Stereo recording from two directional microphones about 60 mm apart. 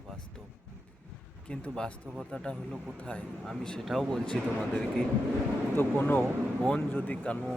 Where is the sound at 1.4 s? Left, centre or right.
Centre.